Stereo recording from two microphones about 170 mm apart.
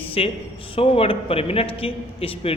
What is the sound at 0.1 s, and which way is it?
A man's voice, 35° left (ahead or behind).